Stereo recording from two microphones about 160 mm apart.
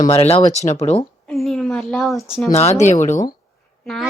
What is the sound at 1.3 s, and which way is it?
Speech, centre (ahead or behind).